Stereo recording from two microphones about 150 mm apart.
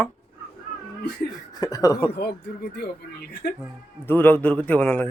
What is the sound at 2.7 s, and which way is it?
Speech, 90° left.